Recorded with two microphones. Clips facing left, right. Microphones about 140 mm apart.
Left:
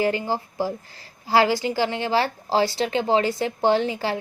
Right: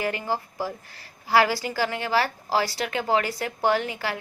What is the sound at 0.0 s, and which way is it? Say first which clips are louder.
A woman's voice: left 4 dB; 30° left (ahead or behind).